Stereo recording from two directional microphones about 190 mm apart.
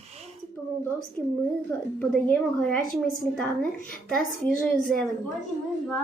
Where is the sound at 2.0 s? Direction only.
10° left (ahead or behind).